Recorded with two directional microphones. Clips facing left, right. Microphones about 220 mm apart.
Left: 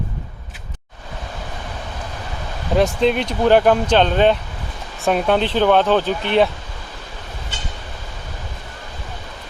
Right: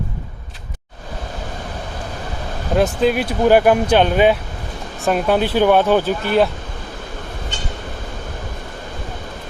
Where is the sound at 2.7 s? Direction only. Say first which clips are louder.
Even; centre (ahead or behind).